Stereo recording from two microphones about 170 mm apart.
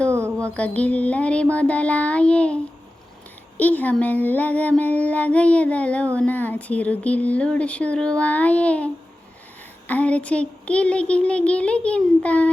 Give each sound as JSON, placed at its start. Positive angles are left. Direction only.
{"t": 0.1, "sound": "mantra", "side_deg": -15}
{"t": 0.4, "sound": "speech", "side_deg": 5}
{"t": 3.6, "sound": "speech", "side_deg": 10}